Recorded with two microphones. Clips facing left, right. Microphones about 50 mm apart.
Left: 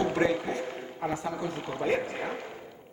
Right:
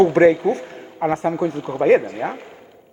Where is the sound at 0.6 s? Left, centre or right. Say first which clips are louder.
Right 10 dB; right.